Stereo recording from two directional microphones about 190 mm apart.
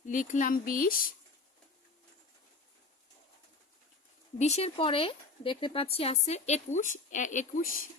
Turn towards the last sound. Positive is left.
turn(degrees=40)  # may be behind; listen again after turning